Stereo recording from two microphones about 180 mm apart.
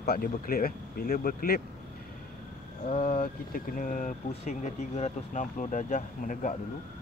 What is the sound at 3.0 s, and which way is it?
Speech, 50° left (ahead or behind).